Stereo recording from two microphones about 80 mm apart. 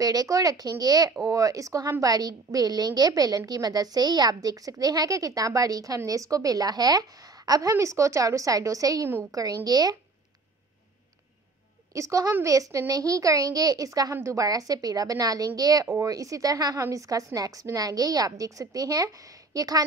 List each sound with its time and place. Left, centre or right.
0.0 s a woman's voice: right
7.7 s a woman's voice: right
11.9 s a woman's voice: right